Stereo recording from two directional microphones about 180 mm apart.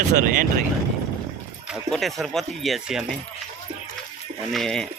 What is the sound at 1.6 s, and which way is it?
Speech, centre (ahead or behind).